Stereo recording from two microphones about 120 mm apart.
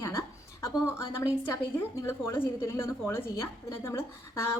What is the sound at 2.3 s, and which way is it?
A woman's voice, 20° left (ahead or behind).